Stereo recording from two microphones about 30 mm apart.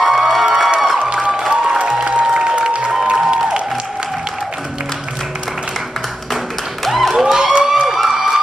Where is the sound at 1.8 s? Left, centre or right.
Right.